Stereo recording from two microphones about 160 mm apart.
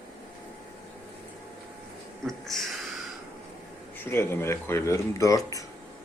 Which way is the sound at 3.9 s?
15° left (ahead or behind).